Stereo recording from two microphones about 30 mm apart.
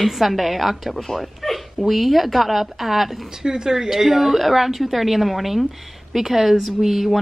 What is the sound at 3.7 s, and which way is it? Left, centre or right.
A woman's voice, centre.